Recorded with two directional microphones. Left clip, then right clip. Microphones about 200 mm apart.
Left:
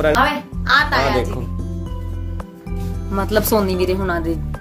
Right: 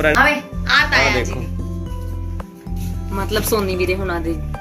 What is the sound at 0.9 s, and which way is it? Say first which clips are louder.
Speech: right 2 dB; 40° left (ahead or behind).